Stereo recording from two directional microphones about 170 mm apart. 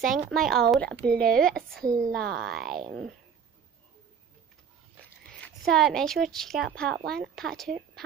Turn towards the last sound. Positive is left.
turn(degrees=0)  # may be behind; listen again after turning